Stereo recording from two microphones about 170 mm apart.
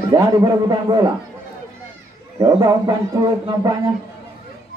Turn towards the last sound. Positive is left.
turn(degrees=-20)  # may be behind; listen again after turning